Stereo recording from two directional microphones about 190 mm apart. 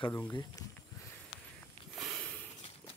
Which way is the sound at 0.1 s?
15° left (ahead or behind).